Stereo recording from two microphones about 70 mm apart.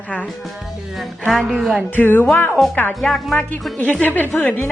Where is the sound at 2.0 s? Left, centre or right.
Left.